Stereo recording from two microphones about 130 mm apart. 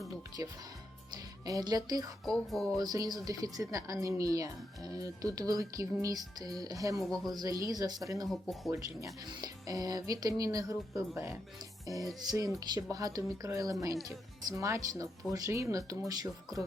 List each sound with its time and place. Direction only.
0.4 s speech: 20° right (ahead or behind)
2.2 s music: centre (ahead or behind)
2.7 s speech: 30° right (ahead or behind)
7.0 s music: centre (ahead or behind)
7.3 s speech: 25° right (ahead or behind)
8.3 s music: centre (ahead or behind)
8.7 s speech: 25° right (ahead or behind)